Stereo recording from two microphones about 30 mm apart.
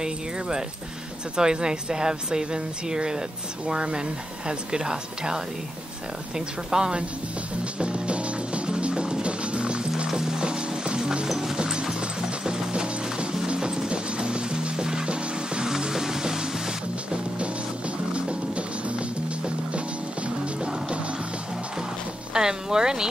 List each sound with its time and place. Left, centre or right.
0.0 s speech: right
7.8 s music: right
10.0 s music: right
15.6 s music: centre
18.1 s music: right
22.3 s a sound: right